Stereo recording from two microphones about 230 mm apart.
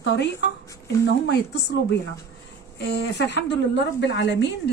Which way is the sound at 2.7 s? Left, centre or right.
Left.